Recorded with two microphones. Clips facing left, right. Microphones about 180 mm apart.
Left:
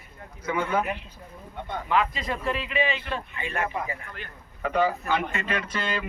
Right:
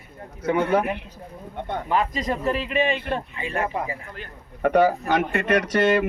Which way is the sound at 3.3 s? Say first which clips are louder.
Right 3 dB; 35° right (ahead or behind).